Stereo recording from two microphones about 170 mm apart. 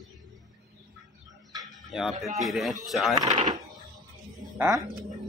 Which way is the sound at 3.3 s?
50° right (ahead or behind).